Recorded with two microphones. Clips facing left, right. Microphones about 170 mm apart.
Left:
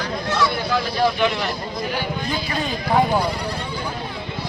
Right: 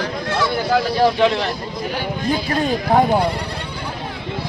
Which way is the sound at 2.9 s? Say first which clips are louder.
Right 2 dB; 50° right (ahead or behind).